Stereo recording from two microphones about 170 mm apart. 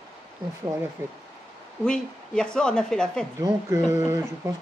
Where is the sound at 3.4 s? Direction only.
15° right (ahead or behind).